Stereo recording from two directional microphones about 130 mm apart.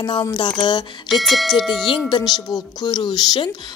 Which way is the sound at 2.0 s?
35° left (ahead or behind).